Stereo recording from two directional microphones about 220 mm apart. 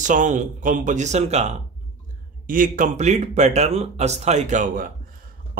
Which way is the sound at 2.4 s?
40° right (ahead or behind).